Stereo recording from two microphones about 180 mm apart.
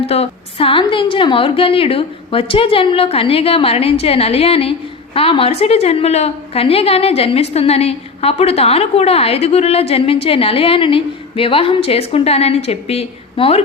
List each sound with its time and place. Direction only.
0.0 s a woman's voice: 35° left (ahead or behind)